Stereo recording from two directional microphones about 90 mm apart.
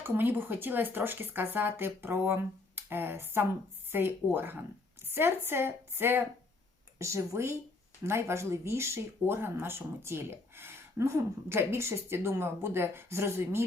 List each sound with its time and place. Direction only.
0.0 s speech: 25° right (ahead or behind)